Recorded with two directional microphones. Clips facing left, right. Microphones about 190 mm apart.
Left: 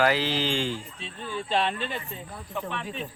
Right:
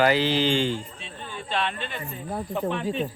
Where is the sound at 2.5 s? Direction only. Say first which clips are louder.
Right 6 dB; 35° right (ahead or behind).